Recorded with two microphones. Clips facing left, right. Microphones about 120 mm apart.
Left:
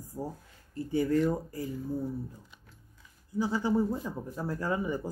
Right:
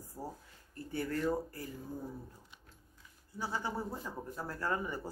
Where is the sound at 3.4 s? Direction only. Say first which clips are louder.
Left 10 dB; 15° left (ahead or behind).